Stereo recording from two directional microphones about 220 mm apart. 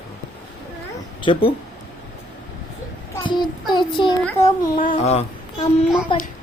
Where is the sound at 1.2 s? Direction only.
25° left (ahead or behind).